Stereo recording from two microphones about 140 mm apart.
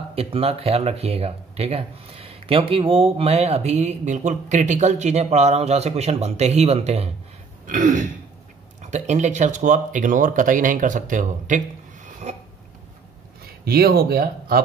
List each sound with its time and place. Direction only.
0.1 s speech: 45° right (ahead or behind)
7.6 s speech: 65° right (ahead or behind)
12.3 s speech: 50° right (ahead or behind)
13.7 s speech: 90° right